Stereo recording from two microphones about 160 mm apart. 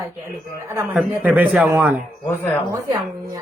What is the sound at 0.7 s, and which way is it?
Speech, 15° right (ahead or behind).